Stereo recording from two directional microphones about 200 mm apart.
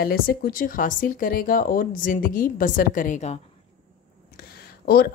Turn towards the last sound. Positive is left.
turn(degrees=50)  # may be behind; listen again after turning